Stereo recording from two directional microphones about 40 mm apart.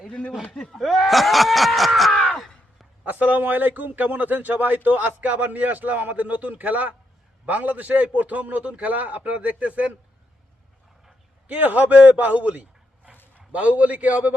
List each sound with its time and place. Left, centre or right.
0.5 s speech: centre
0.8 s speech: centre
2.1 s a sound: centre
3.0 s a man's voice: right
11.4 s a man's voice: right